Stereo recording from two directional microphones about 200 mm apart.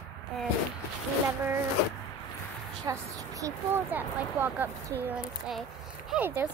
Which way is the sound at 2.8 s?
15° right (ahead or behind).